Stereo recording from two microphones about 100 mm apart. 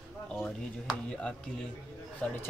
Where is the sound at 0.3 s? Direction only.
5° right (ahead or behind).